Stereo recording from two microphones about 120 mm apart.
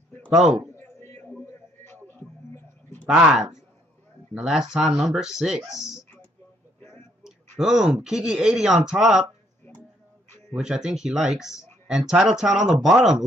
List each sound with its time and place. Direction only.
0.7 s a sound: 20° left (ahead or behind)
3.1 s speech: 5° right (ahead or behind)
7.5 s speech: 5° right (ahead or behind)
10.5 s speech: 5° right (ahead or behind)